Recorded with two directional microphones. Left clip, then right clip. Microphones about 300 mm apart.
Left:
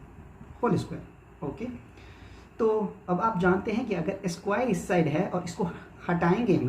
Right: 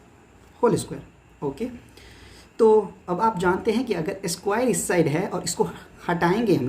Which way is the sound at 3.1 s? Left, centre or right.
Right.